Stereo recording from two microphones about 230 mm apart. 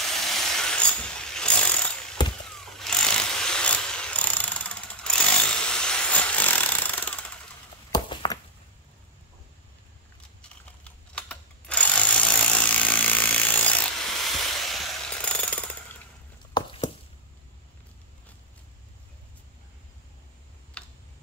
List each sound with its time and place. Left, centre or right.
0.1 s ratchet: centre
2.2 s vehicle: centre
2.6 s jackhammer: centre
7.9 s walk: centre
10.8 s tools: centre
14.3 s jackhammer: centre
16.5 s a sound: centre